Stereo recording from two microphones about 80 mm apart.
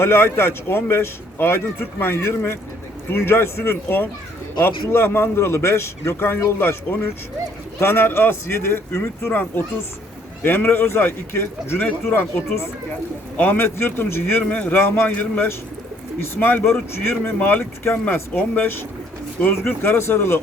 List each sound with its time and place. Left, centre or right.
0.0 s a man's voice: left